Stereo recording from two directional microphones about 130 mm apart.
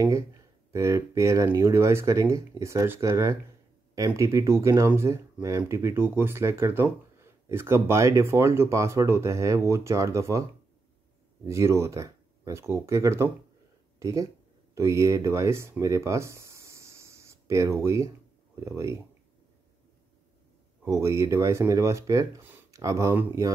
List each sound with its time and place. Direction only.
0.7 s speech: 20° right (ahead or behind)
11.4 s speech: 20° right (ahead or behind)
15.8 s a sound: 20° right (ahead or behind)
18.6 s speech: 25° right (ahead or behind)
20.8 s speech: 25° right (ahead or behind)
22.4 s a sound: 15° right (ahead or behind)
22.8 s speech: 25° right (ahead or behind)